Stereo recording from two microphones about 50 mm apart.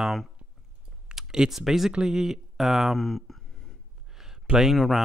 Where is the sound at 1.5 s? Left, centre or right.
Centre.